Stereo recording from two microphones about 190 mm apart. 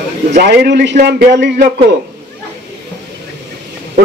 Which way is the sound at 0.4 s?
60° right (ahead or behind).